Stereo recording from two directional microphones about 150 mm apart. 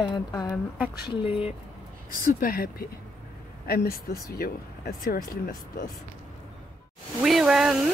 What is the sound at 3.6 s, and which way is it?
Speech, 90° left.